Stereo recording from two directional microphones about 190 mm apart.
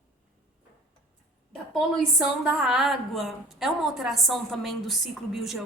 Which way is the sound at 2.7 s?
Centre (ahead or behind).